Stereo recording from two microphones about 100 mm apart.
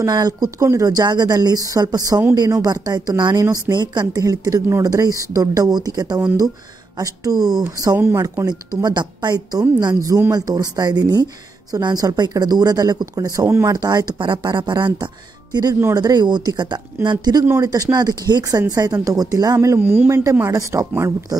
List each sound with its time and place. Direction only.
0.0 s speech: 40° right (ahead or behind)
13.7 s speech: 40° right (ahead or behind)
19.8 s speech: 20° right (ahead or behind)
20.3 s speech: 30° right (ahead or behind)